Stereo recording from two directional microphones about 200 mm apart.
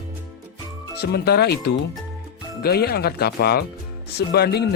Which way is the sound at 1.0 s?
55° left (ahead or behind).